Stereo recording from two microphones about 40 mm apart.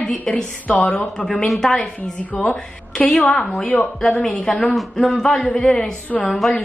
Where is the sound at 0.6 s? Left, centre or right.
Left.